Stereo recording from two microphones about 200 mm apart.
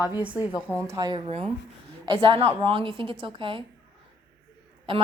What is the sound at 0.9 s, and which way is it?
Speech, 15° right (ahead or behind).